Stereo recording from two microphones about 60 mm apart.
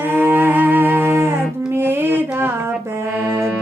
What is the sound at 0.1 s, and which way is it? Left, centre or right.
Music, right.